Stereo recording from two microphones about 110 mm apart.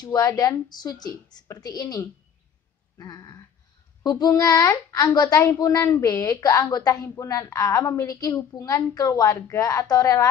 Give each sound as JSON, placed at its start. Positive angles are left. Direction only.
{"t": 0.0, "sound": "a woman's voice", "side_deg": 35}